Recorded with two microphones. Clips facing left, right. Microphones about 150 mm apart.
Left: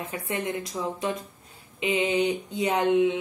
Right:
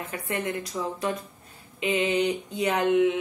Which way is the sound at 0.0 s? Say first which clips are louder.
Even; 15° left (ahead or behind).